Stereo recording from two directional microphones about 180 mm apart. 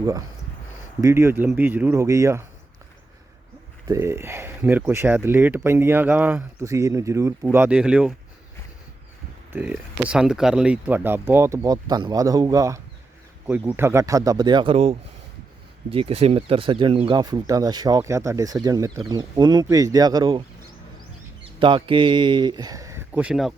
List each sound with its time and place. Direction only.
0.0 s speech: 20° right (ahead or behind)
3.8 s speech: 15° right (ahead or behind)
9.5 s speech: 10° right (ahead or behind)
21.6 s speech: 30° right (ahead or behind); by 23.6 s centre (ahead or behind)